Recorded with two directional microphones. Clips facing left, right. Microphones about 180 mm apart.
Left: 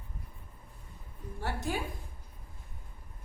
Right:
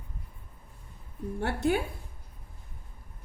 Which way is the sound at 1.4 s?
65° right (ahead or behind).